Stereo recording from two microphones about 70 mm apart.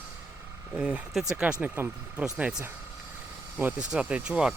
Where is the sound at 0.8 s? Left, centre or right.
Centre.